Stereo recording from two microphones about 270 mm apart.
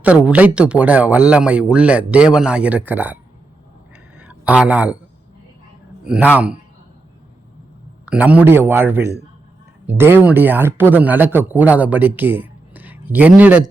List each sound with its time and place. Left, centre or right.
0.0 s speech: centre
4.2 s a sound: centre
6.3 s speech: centre
8.0 s speech: centre